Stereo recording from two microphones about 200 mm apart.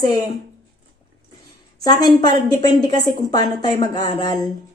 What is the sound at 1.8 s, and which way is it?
A woman's voice, 20° left (ahead or behind).